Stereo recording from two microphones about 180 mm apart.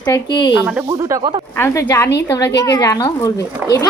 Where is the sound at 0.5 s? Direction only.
5° right (ahead or behind).